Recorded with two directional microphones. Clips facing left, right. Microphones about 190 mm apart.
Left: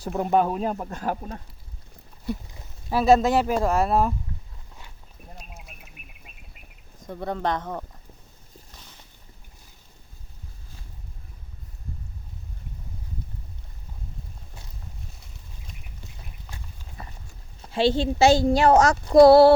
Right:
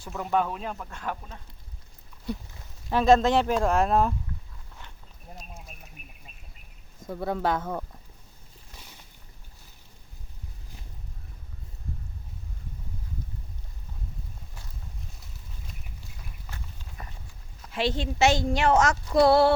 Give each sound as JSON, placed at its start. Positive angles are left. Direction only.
{"t": 0.2, "sound": "speech", "side_deg": 40}
{"t": 2.5, "sound": "speech", "side_deg": 10}
{"t": 7.1, "sound": "speech", "side_deg": -5}
{"t": 17.6, "sound": "speech", "side_deg": 30}